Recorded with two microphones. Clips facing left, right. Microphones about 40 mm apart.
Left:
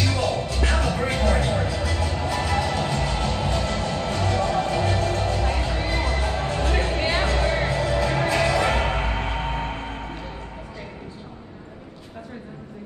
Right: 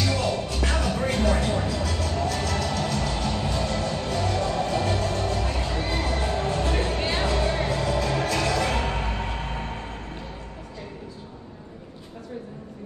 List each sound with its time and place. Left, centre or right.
0.6 s music: centre
1.2 s a sound: centre
1.7 s music: centre; by 9.8 s left